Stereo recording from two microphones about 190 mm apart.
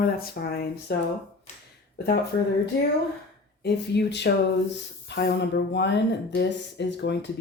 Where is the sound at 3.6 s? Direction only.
65° left (ahead or behind).